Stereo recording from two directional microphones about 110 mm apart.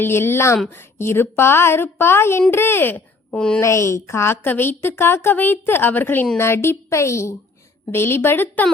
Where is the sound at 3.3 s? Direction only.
5° left (ahead or behind).